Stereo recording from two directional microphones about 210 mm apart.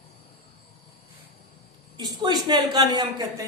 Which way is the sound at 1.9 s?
20° right (ahead or behind).